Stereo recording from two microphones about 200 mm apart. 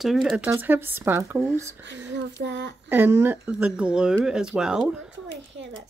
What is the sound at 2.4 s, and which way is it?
Speech, 60° right (ahead or behind).